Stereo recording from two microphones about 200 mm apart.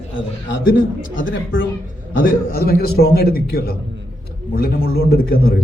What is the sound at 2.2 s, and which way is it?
Speech, 50° left (ahead or behind).